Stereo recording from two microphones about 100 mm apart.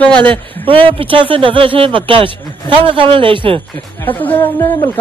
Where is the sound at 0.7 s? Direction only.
65° right (ahead or behind).